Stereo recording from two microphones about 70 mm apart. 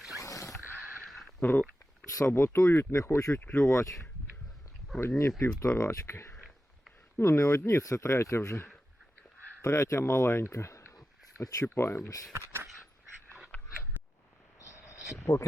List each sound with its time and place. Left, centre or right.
0.2 s zipper: left
1.0 s a sound: centre
1.4 s speech: left
2.0 s speech: left
3.4 s speech: centre
4.9 s speech: left
9.6 s speech: left
10.0 s speech: left
11.6 s speech: left
13.5 s biting: centre
14.6 s a sound: left